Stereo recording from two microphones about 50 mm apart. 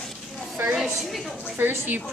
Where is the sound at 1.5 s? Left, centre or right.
Right.